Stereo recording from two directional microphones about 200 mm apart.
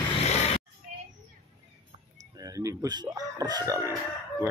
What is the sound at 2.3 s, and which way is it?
Speech, 15° right (ahead or behind).